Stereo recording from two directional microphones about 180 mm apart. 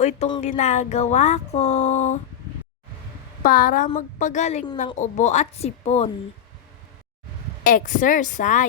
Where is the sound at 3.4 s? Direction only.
50° left (ahead or behind).